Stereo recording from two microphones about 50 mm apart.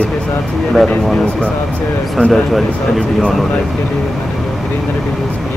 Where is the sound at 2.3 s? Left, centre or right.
Centre.